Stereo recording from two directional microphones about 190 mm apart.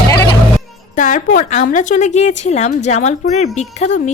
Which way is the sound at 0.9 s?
45° left (ahead or behind).